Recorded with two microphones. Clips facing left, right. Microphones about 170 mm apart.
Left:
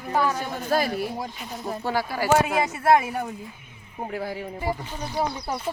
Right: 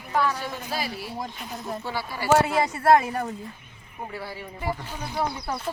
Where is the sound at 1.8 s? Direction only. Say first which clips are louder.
Left 6 dB; 45° left (ahead or behind).